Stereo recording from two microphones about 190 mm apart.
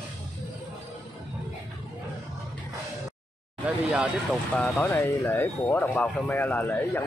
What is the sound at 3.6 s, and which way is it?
Speech, 5° right (ahead or behind).